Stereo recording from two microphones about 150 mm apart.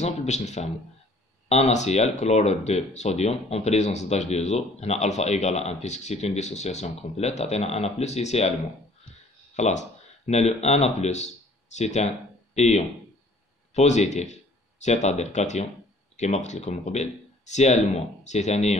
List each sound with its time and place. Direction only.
0.0 s speech: 50° left (ahead or behind)
9.6 s speech: 50° left (ahead or behind)